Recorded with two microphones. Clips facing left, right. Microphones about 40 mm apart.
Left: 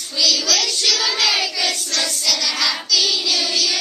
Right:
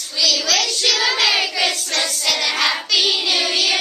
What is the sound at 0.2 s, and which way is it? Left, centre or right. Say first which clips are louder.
Child singing: right 1 dB; centre.